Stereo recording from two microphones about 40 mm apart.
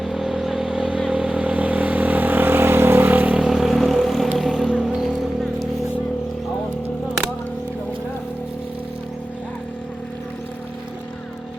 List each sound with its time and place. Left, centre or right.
0.0 s vehicle: centre
0.8 s vehicle: right
3.4 s vehicle: centre